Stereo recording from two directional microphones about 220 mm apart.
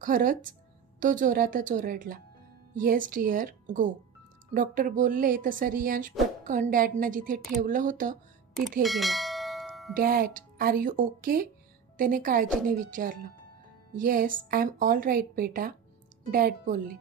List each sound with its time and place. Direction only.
0.0 s a woman's voice: 35° right (ahead or behind)
8.8 s bell: centre (ahead or behind)
9.9 s a woman's voice: 40° right (ahead or behind)